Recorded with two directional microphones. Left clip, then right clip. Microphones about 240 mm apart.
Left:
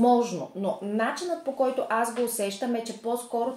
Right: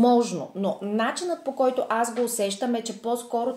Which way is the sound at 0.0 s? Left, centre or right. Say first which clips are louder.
Right 2 dB; right.